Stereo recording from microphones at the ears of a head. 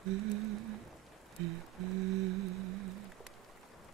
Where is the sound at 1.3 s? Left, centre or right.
Right.